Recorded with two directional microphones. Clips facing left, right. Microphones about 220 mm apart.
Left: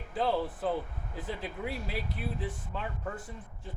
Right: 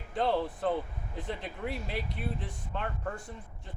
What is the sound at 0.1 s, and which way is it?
Speech, 5° left (ahead or behind).